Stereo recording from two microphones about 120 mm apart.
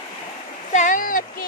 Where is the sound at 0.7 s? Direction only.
90° left.